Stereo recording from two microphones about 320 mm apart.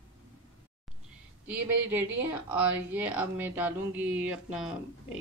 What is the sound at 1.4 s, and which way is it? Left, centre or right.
Speech, centre.